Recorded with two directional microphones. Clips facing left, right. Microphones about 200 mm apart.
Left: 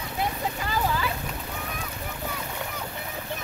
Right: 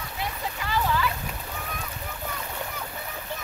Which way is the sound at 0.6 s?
45° left (ahead or behind).